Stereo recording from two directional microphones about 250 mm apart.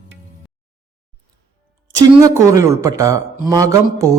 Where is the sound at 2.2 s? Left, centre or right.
Centre.